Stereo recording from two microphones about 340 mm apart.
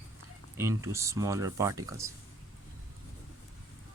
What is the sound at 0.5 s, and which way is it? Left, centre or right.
Speech, centre.